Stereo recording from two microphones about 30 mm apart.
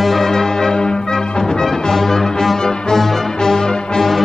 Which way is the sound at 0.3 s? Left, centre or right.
Centre.